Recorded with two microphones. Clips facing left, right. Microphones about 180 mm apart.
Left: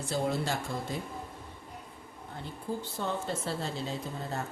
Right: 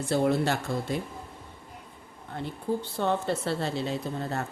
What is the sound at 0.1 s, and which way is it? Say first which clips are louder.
Speech: right 6 dB; 65° right (ahead or behind).